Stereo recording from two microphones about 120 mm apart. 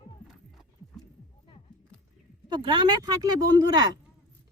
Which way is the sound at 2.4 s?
40° right (ahead or behind).